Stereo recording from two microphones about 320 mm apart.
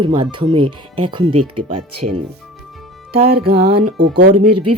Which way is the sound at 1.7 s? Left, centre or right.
Right.